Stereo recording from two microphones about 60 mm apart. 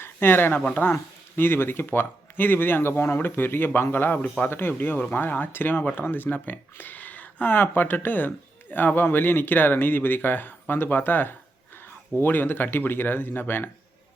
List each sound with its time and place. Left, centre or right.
0.0 s speech: left